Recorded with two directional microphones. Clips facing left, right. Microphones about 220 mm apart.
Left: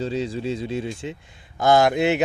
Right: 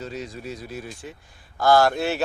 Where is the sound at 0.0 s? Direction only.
30° left (ahead or behind).